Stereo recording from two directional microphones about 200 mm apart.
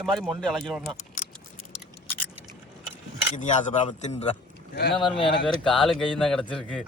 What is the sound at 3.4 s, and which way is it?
A man's voice, 40° left (ahead or behind).